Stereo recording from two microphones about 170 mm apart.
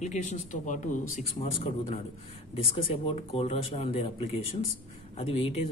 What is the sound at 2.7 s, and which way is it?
Speech, 35° left (ahead or behind).